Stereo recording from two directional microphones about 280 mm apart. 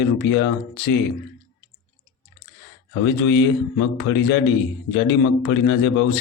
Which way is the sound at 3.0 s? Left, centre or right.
Left.